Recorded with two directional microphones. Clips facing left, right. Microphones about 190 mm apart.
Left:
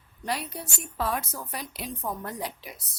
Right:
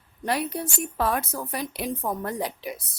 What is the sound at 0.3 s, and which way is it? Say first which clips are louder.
A woman's voice: right 6 dB; 60° right (ahead or behind).